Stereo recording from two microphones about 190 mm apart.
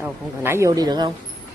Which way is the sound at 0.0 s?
10° right (ahead or behind).